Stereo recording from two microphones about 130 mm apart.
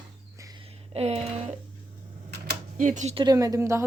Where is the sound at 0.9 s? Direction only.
55° right (ahead or behind).